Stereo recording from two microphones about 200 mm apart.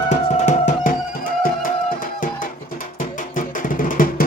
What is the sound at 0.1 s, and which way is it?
Music, 35° left (ahead or behind).